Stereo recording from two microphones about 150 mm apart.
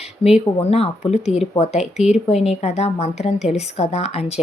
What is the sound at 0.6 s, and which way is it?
A woman's voice, 40° left (ahead or behind).